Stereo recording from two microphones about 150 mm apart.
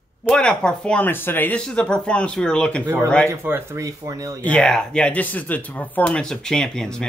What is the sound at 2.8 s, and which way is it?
Speech, 15° right (ahead or behind).